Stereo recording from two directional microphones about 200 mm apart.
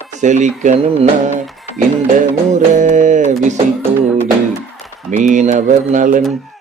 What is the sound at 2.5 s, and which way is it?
Mantra, 40° right (ahead or behind).